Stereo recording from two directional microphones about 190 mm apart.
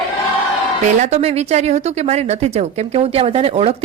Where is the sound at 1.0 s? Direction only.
35° right (ahead or behind).